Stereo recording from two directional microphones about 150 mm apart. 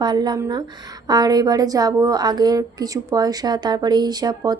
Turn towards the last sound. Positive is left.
turn(degrees=-25)  # may be behind; listen again after turning